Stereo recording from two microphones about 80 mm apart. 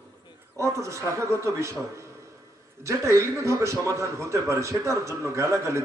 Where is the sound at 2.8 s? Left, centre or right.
Right.